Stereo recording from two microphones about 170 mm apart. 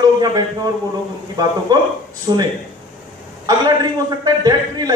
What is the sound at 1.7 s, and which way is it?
A man's voice, 25° right (ahead or behind).